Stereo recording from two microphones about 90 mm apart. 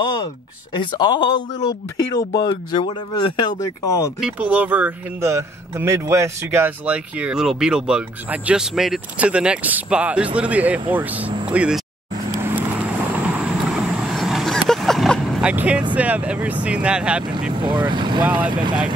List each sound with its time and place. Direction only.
0.7 s speech: 55° left (ahead or behind)
3.5 s speech: 40° left (ahead or behind)
4.2 s speech: 15° right (ahead or behind)
5.2 s speech: 30° right (ahead or behind)
6.9 s speech: 10° right (ahead or behind)
12.4 s vehicle: 25° right (ahead or behind); by 15.3 s centre (ahead or behind)
15.4 s speech: 15° right (ahead or behind)
17.6 s speech: 60° right (ahead or behind)
18.2 s speech: 15° right (ahead or behind)
18.5 s speech: 55° right (ahead or behind)